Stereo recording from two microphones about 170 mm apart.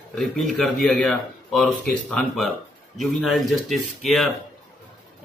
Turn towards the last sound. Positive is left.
turn(degrees=0)  # may be behind; listen again after turning